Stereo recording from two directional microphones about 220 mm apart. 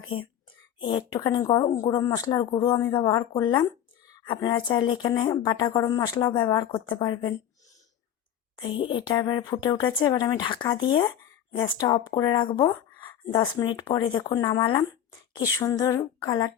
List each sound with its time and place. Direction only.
0.8 s speech: 20° left (ahead or behind)
8.5 s a woman's voice: 20° left (ahead or behind)